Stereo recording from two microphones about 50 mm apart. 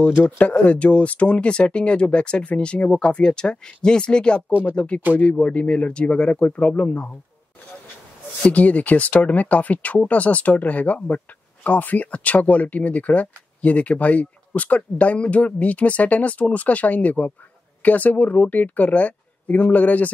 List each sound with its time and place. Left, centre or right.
0.1 s speech: left
8.4 s speech: left